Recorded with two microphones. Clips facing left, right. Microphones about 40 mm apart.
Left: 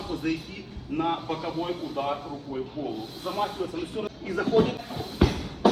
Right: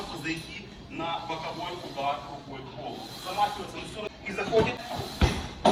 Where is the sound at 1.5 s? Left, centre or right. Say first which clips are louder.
Left 5 dB; right.